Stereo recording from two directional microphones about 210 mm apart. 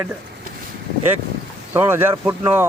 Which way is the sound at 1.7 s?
10° right (ahead or behind).